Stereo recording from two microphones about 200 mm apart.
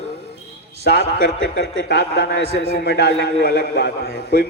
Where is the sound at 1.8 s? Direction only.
55° left (ahead or behind).